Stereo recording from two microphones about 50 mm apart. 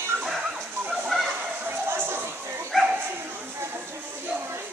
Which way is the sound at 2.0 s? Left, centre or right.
Right.